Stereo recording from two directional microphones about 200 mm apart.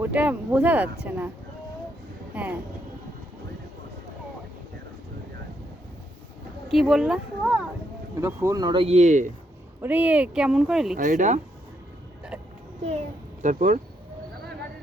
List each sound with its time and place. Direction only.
0.0 s speech: 5° right (ahead or behind)
2.3 s speech: 10° right (ahead or behind)
6.7 s speech: centre (ahead or behind); by 9.3 s 35° right (ahead or behind)
9.8 s speech: 10° right (ahead or behind)
10.9 s speech: 40° right (ahead or behind)
13.4 s speech: 40° right (ahead or behind)